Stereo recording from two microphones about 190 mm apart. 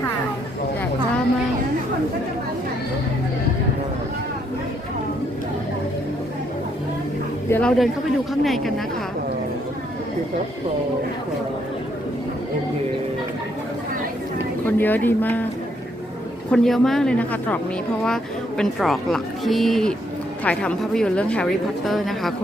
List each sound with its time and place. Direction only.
7.5 s a woman's voice: 5° left (ahead or behind)
14.8 s speech: 10° left (ahead or behind)
16.5 s a woman's voice: centre (ahead or behind)